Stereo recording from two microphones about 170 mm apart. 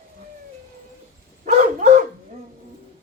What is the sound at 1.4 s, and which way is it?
Dog, 50° right (ahead or behind).